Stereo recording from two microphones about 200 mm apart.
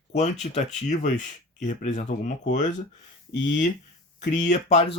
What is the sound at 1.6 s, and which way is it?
Speech, 35° left (ahead or behind).